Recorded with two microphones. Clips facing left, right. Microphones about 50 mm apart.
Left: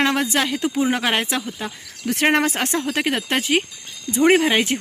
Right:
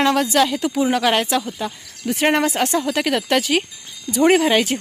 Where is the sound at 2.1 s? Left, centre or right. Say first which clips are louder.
Right 1 dB; left.